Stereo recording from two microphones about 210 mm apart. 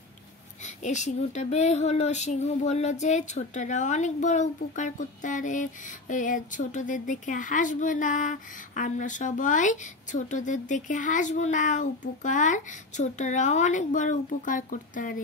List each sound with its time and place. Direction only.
0.7 s speech: 35° left (ahead or behind)